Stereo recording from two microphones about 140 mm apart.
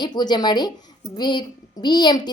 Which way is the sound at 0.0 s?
30° left (ahead or behind).